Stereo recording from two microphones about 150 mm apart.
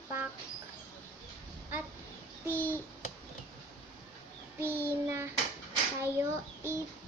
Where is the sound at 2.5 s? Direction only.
15° left (ahead or behind).